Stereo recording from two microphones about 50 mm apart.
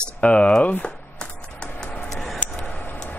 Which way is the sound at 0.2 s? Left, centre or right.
Left.